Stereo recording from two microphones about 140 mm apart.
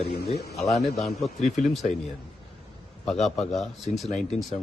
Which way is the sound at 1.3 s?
55° left (ahead or behind).